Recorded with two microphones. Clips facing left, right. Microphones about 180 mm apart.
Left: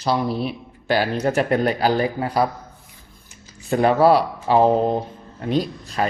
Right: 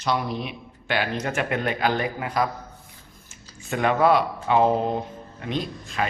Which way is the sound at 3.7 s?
35° left (ahead or behind).